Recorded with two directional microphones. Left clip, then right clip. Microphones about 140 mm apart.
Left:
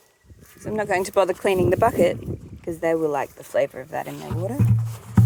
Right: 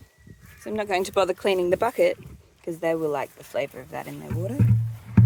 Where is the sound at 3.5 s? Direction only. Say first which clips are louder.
Left 6 dB; 20° left (ahead or behind).